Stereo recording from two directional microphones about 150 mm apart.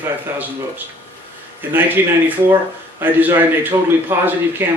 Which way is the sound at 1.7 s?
15° right (ahead or behind).